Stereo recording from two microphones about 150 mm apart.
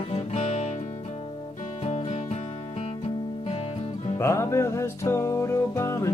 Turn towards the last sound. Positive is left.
turn(degrees=20)  # may be behind; listen again after turning